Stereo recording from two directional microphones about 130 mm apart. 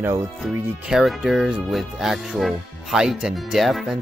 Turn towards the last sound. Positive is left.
turn(degrees=0)  # may be behind; listen again after turning